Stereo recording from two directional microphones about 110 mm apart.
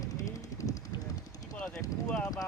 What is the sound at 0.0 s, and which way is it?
Vehicle, 30° left (ahead or behind).